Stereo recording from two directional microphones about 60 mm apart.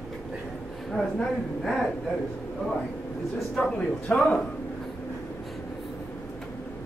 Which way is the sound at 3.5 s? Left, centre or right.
Centre.